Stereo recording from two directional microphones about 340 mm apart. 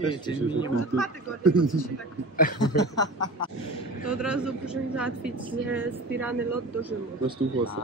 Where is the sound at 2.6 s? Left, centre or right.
Centre.